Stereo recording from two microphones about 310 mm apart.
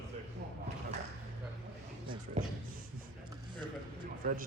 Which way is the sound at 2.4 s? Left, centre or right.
Right.